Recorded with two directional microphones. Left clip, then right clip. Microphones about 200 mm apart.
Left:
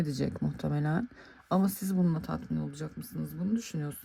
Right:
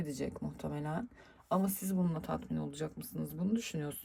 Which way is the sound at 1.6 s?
10° left (ahead or behind).